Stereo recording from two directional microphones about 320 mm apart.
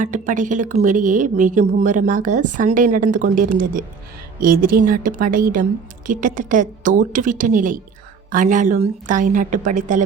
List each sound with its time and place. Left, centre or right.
0.0 s speech: right